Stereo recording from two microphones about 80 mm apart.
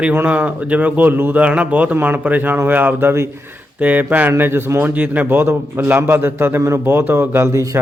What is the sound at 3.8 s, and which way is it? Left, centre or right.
A man's voice, right.